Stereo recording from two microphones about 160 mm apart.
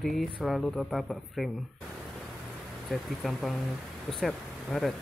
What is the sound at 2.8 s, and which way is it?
Speech, centre (ahead or behind).